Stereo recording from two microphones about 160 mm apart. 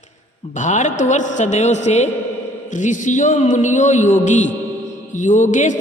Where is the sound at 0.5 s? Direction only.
50° left (ahead or behind).